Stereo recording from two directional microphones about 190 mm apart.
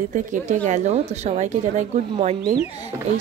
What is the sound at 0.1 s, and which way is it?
A woman's voice, 40° right (ahead or behind).